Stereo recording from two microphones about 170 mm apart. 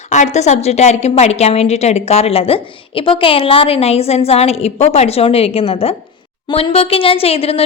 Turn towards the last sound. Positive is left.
turn(degrees=35)  # may be behind; listen again after turning